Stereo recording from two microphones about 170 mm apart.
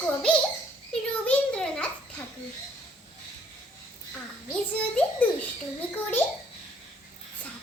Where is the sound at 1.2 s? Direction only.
5° left (ahead or behind).